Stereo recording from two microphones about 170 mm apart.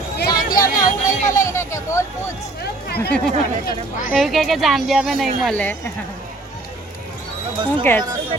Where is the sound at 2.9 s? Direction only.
70° left (ahead or behind).